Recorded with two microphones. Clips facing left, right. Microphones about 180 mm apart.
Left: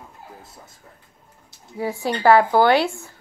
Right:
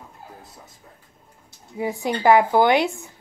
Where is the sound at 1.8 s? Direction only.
15° right (ahead or behind).